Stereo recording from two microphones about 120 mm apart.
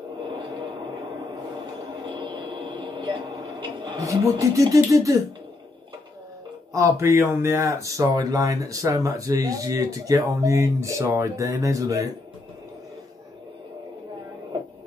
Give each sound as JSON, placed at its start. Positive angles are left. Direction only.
{"t": 2.1, "sound": "a sound", "side_deg": -40}
{"t": 4.0, "sound": "speech", "side_deg": -25}
{"t": 6.7, "sound": "speech", "side_deg": -25}